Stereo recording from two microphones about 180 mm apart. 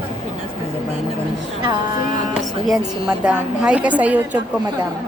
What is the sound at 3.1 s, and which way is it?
A woman's voice, 5° right (ahead or behind).